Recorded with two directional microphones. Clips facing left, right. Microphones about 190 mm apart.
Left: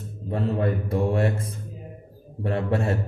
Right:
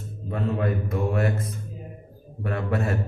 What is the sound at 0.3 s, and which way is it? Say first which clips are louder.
Speech: left 1 dB; 30° left (ahead or behind).